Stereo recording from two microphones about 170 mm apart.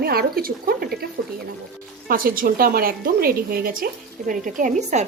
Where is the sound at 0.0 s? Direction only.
65° right (ahead or behind).